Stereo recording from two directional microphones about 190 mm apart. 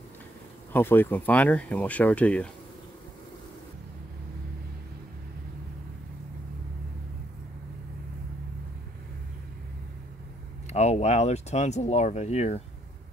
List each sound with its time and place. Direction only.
0.7 s speech: 10° left (ahead or behind)
10.7 s speech: 35° left (ahead or behind)